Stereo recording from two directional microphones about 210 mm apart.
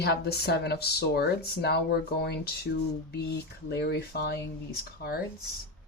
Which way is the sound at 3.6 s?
50° left (ahead or behind).